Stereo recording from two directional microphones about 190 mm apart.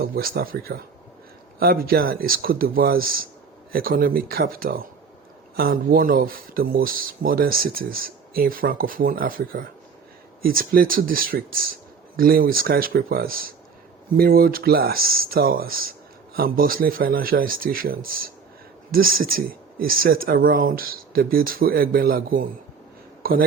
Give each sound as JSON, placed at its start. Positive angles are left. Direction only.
{"t": 0.0, "sound": "speech", "side_deg": -50}